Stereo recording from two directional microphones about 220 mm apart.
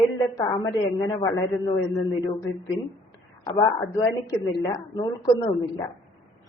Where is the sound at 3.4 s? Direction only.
20° left (ahead or behind).